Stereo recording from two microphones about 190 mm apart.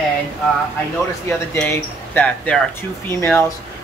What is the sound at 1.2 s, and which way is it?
Speech, 10° left (ahead or behind).